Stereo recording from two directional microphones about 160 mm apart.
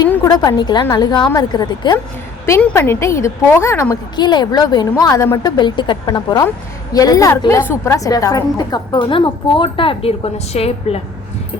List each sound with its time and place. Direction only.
0.1 s a woman's voice: 20° left (ahead or behind)
2.5 s a woman's voice: 10° left (ahead or behind)
4.1 s a woman's voice: 25° left (ahead or behind)